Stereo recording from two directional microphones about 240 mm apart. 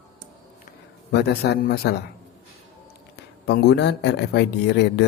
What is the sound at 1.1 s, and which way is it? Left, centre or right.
Speech, left.